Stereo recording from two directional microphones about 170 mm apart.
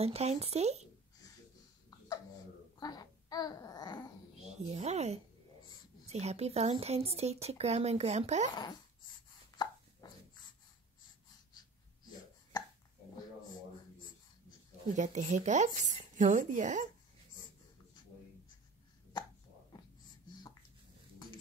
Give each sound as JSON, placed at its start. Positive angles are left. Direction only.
{"t": 0.0, "sound": "speech", "side_deg": -40}
{"t": 2.8, "sound": "babbling", "side_deg": 25}
{"t": 4.4, "sound": "speech", "side_deg": -40}
{"t": 8.5, "sound": "a sound", "side_deg": 25}
{"t": 10.0, "sound": "dog", "side_deg": 25}
{"t": 15.0, "sound": "speech", "side_deg": -45}